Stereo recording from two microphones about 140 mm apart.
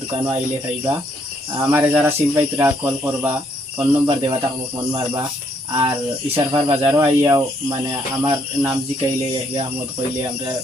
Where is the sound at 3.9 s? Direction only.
40° right (ahead or behind).